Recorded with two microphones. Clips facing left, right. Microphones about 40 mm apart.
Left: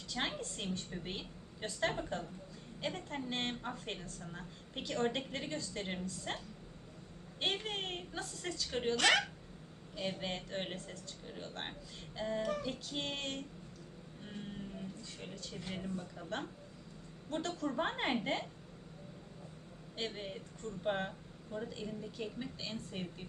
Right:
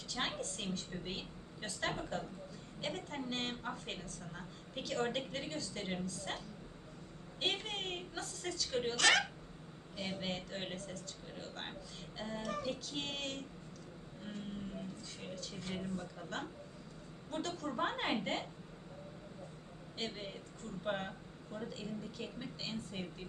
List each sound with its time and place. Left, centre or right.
0.1 s a woman's voice: centre
12.1 s a woman's voice: centre
15.2 s a woman's voice: centre
17.3 s a woman's voice: centre
20.1 s a woman's voice: centre